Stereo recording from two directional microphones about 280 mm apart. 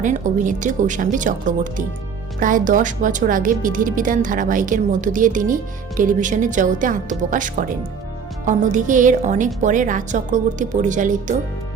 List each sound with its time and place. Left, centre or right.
0.0 s speech: right